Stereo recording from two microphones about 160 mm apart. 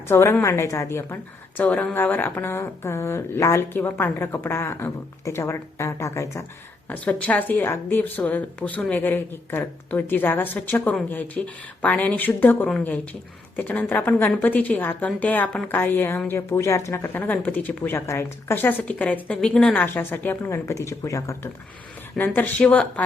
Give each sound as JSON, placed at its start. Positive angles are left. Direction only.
{"t": 0.1, "sound": "a woman's voice", "side_deg": 15}